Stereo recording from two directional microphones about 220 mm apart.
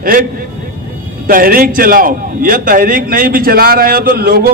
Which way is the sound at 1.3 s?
40° right (ahead or behind).